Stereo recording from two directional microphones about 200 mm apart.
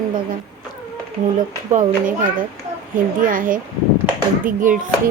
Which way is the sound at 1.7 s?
40° right (ahead or behind).